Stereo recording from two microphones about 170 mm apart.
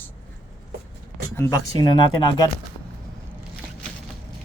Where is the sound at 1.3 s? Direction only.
20° left (ahead or behind).